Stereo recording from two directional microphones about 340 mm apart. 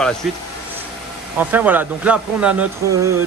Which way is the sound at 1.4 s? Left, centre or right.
Centre.